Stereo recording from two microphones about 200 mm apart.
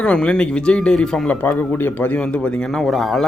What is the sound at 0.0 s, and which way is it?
Speech, 5° left (ahead or behind).